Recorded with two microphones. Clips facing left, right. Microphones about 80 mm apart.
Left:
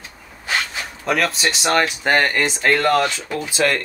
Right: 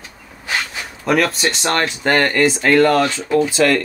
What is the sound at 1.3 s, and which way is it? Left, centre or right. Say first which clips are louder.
Speech: even; centre.